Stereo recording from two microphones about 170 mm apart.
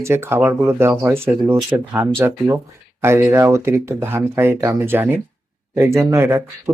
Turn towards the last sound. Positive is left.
turn(degrees=-15)  # may be behind; listen again after turning